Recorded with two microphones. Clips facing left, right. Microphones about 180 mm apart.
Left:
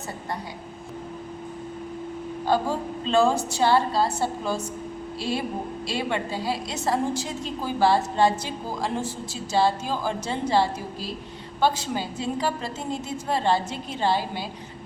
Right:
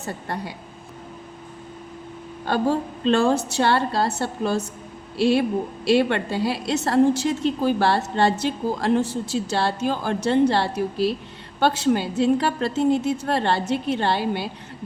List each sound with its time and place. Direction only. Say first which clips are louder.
2.5 s a woman's voice: right 3 dB; 65° right (ahead or behind)